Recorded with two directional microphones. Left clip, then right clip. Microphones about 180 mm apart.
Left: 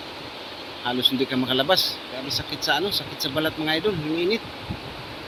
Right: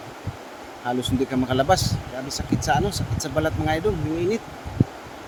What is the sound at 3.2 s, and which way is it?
Speech, 5° right (ahead or behind).